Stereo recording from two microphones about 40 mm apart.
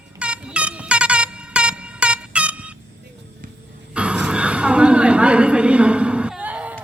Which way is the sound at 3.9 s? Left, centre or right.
Right.